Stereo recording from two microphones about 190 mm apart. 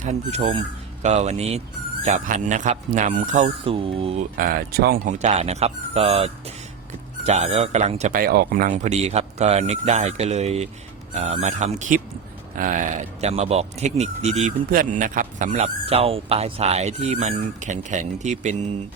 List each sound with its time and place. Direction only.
0.0 s speech: 35° right (ahead or behind)
4.4 s speech: 50° right (ahead or behind)
5.1 s speech: 35° right (ahead or behind)